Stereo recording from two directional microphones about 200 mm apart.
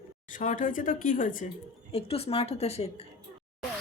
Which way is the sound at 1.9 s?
30° left (ahead or behind).